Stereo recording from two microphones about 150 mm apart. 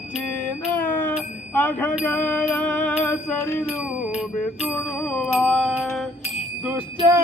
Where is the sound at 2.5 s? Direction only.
10° left (ahead or behind).